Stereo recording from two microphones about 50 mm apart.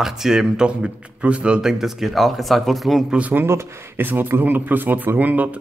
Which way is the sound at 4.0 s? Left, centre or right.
Right.